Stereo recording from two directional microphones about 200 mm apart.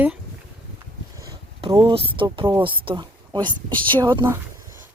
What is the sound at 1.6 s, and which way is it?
Speech, 25° right (ahead or behind).